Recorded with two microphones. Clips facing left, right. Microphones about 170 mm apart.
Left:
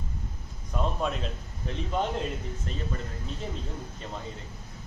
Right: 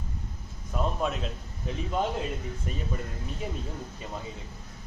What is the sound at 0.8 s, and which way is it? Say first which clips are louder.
A man's voice: even; centre (ahead or behind).